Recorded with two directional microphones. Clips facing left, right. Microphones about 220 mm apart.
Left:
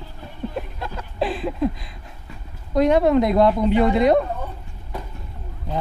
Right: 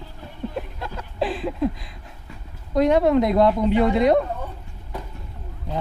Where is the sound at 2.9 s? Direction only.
20° left (ahead or behind).